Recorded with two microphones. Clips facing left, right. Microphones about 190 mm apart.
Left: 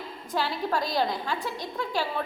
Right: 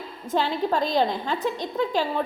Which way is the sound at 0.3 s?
20° right (ahead or behind).